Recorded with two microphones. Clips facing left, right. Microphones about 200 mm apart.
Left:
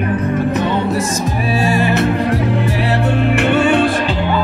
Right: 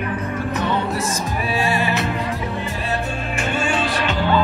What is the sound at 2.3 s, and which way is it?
Music, 75° left (ahead or behind).